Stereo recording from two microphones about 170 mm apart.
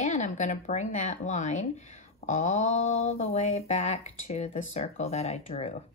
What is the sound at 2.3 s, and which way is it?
Mantra, 40° left (ahead or behind).